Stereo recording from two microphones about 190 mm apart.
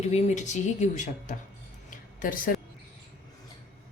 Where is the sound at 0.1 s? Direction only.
40° left (ahead or behind).